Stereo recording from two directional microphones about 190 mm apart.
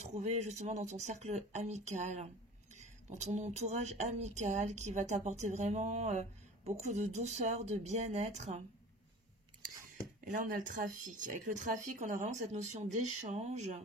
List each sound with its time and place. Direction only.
0.0 s speech: 35° right (ahead or behind)
10.2 s speech: 45° right (ahead or behind)